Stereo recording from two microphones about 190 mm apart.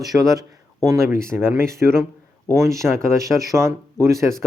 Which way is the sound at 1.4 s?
10° right (ahead or behind).